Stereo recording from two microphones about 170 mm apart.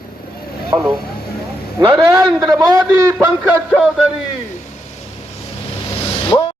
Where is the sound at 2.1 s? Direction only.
20° right (ahead or behind).